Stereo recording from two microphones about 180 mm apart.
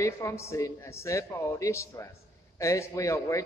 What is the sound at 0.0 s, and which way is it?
A man's voice, 15° left (ahead or behind).